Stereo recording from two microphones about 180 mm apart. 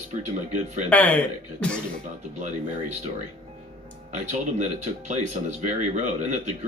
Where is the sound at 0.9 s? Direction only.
10° left (ahead or behind).